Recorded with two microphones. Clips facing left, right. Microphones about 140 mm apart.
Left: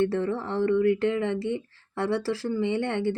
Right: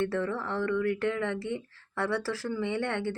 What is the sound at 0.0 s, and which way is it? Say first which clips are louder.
Speech: left 4 dB; 20° left (ahead or behind).